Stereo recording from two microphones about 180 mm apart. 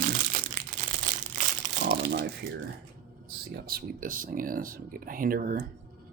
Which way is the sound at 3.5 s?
60° right (ahead or behind).